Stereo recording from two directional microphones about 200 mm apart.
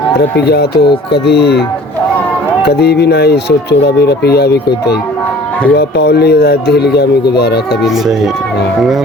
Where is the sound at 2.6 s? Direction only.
55° left (ahead or behind).